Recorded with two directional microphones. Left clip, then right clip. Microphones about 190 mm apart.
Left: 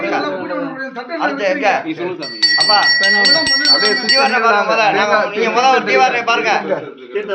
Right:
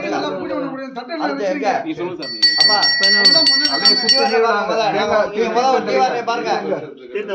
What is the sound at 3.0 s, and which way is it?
Speech, 55° right (ahead or behind).